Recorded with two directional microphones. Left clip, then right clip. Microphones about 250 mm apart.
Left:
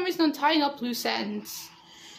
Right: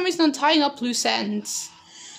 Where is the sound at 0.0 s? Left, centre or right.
Right.